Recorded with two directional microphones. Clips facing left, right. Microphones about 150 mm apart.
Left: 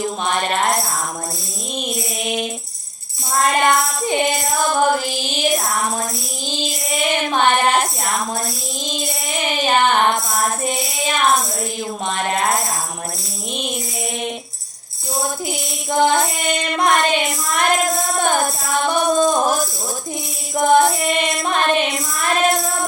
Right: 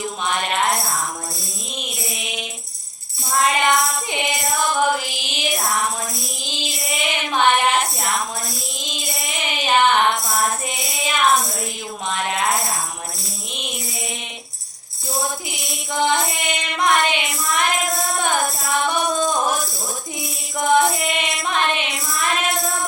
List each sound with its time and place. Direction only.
0.3 s music: 35° left (ahead or behind)
2.2 s tambourine: 45° left (ahead or behind)
3.4 s music: 40° left (ahead or behind)
6.5 s child singing: 35° left (ahead or behind)
8.9 s music: 40° left (ahead or behind)
12.0 s a sound: 40° left (ahead or behind)
15.4 s music: 45° left (ahead or behind)
20.6 s music: 40° left (ahead or behind)